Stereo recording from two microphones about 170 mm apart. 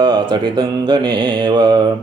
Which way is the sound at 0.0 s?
30° right (ahead or behind).